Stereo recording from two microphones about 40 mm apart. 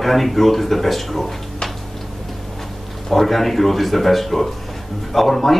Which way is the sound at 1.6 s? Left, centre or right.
Centre.